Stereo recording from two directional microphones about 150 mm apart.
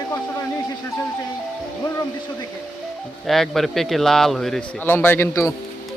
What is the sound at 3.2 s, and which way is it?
Speech, centre (ahead or behind).